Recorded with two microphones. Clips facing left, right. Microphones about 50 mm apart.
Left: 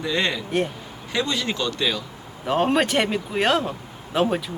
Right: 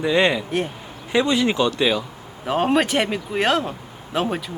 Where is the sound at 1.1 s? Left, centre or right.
Centre.